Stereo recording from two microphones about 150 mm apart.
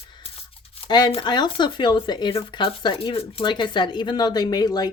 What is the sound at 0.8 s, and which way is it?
Speech, 30° left (ahead or behind).